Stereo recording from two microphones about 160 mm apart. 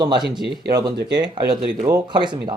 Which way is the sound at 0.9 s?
90° right.